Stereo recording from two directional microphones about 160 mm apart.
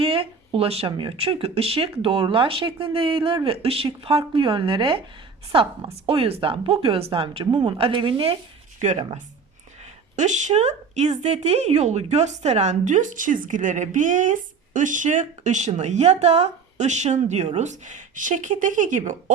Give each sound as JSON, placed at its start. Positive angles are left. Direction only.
{"t": 0.0, "sound": "speech", "side_deg": -35}